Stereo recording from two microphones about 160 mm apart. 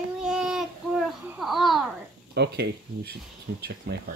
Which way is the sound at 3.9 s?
90° right.